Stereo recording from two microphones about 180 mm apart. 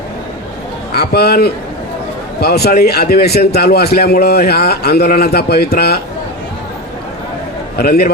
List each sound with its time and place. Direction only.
0.9 s a man's voice: 60° left (ahead or behind)
7.8 s a man's voice: 55° left (ahead or behind)